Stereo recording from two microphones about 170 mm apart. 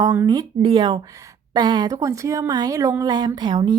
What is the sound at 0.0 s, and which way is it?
A woman's voice, 20° right (ahead or behind).